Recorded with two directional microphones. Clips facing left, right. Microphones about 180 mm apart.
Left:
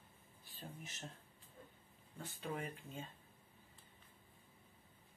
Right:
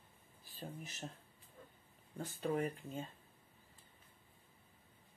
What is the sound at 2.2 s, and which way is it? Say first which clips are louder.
Speech: right 7 dB; 40° right (ahead or behind).